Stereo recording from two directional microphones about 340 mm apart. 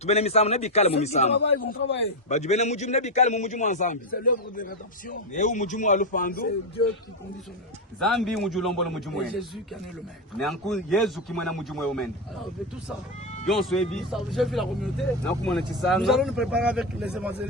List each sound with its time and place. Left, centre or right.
0.0 s a man's voice: centre
1.5 s a man's voice: left
2.3 s a man's voice: centre
7.9 s speech: centre
13.4 s speech: centre